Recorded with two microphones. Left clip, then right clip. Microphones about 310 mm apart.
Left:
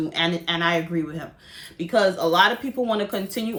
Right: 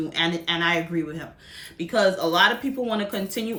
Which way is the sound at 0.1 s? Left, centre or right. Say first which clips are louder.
Right 2 dB; centre.